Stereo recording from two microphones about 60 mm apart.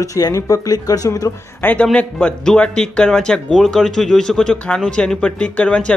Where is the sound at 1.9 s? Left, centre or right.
Centre.